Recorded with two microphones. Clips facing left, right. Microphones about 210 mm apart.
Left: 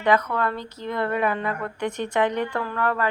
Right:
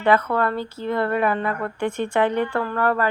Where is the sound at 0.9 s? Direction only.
30° right (ahead or behind).